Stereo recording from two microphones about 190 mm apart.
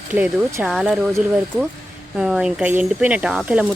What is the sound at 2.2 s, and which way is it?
Speech, centre (ahead or behind).